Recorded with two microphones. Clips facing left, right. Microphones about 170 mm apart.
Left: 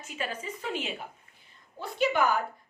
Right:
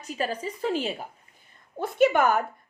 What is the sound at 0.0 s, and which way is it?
A woman's voice, 35° right (ahead or behind).